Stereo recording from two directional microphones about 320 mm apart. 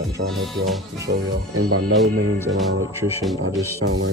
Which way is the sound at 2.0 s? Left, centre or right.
Centre.